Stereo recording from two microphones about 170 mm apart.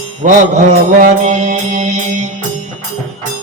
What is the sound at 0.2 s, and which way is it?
Music, 50° right (ahead or behind).